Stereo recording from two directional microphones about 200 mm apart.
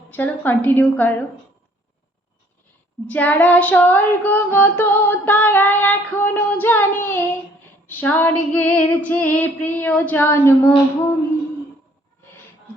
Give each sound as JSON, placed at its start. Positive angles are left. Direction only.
{"t": 0.1, "sound": "female singing", "side_deg": 10}
{"t": 3.1, "sound": "female singing", "side_deg": 10}